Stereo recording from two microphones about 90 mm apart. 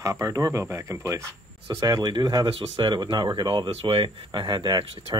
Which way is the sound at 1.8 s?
45° right (ahead or behind).